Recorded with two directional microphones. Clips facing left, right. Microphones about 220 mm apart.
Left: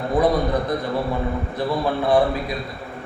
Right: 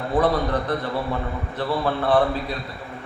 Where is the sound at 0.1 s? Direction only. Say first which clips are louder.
Left 2 dB; 10° left (ahead or behind).